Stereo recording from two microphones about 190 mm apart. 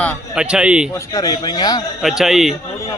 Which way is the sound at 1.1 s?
20° left (ahead or behind).